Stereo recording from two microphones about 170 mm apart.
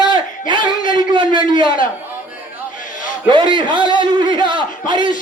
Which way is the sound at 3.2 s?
30° right (ahead or behind).